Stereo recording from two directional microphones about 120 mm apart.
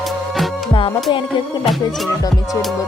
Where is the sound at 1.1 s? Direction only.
45° left (ahead or behind).